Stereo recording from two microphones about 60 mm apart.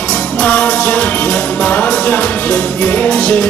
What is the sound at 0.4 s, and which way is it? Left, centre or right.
Music, left.